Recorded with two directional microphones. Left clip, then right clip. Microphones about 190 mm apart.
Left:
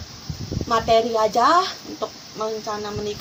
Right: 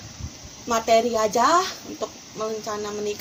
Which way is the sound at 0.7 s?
45° right (ahead or behind).